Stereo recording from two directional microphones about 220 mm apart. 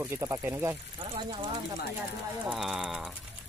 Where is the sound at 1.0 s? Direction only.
20° right (ahead or behind).